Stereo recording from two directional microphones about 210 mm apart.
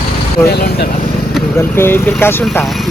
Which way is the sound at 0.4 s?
50° left (ahead or behind).